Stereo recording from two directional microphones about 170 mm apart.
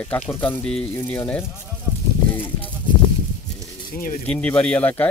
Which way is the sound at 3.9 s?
55° left (ahead or behind).